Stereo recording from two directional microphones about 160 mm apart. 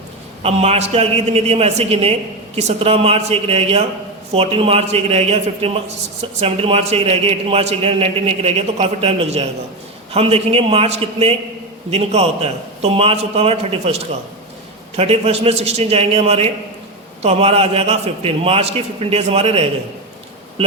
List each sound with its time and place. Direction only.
0.4 s a man's voice: 40° right (ahead or behind)
14.9 s a man's voice: 40° right (ahead or behind)